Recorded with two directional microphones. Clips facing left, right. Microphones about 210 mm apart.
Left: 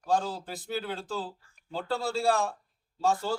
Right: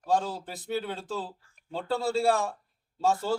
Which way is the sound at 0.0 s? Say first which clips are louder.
Right 1 dB; centre (ahead or behind).